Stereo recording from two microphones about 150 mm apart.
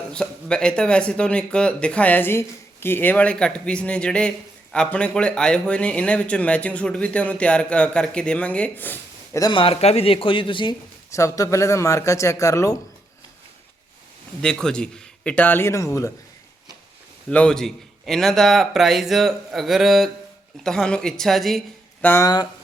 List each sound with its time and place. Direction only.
0.1 s speech: 5° left (ahead or behind)
9.4 s a man's voice: 35° left (ahead or behind)
11.1 s speech: 20° left (ahead or behind)
14.4 s speech: 5° left (ahead or behind); by 16.1 s 20° left (ahead or behind)
17.2 s a man's voice: 5° left (ahead or behind)
22.0 s speech: 15° left (ahead or behind)